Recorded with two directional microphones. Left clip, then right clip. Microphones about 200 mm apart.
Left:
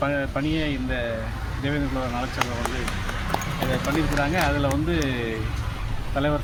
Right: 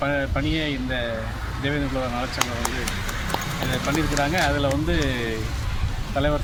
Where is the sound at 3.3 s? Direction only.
10° left (ahead or behind).